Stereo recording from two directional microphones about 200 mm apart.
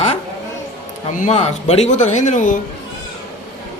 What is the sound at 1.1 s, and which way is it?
Speech, 35° left (ahead or behind).